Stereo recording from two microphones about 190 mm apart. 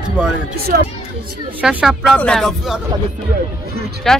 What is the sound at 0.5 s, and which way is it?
Speech, 55° right (ahead or behind).